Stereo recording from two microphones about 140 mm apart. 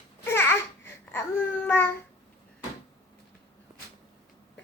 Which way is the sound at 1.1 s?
15° left (ahead or behind).